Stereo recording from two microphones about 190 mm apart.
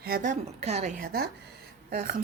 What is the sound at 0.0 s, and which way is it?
A woman's voice, 45° right (ahead or behind).